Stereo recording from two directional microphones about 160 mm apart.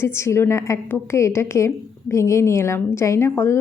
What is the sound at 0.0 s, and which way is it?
A woman's voice, 15° left (ahead or behind).